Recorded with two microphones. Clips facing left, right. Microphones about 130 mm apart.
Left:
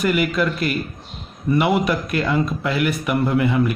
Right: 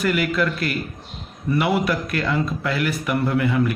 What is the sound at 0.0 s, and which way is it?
Speech, 20° left (ahead or behind).